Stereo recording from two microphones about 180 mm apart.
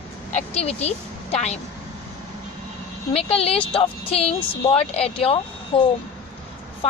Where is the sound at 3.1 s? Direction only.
35° left (ahead or behind).